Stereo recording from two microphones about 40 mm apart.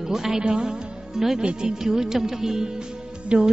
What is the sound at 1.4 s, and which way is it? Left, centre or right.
Speech, right.